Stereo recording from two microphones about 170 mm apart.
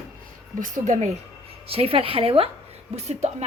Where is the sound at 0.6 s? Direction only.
50° right (ahead or behind).